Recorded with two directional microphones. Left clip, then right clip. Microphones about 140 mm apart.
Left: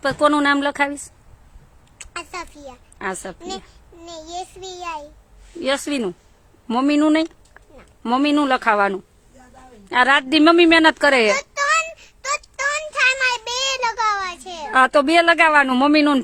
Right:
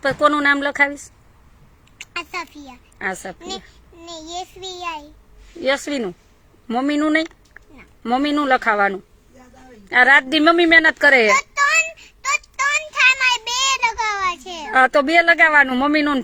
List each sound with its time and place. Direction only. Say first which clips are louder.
0.0 s a child's voice: right 1 dB; 20° left (ahead or behind)
2.0 s a sound: right 3 dB; 20° left (ahead or behind)
3.0 s a child's voice: right 1 dB; 20° left (ahead or behind)
4.6 s a child's voice: right 1 dB; 90° left
5.6 s a child's voice: right 1 dB; 20° left (ahead or behind)
12.4 s child singing: right 3 dB; 25° left (ahead or behind)
14.4 s a child's voice: even; 20° left (ahead or behind)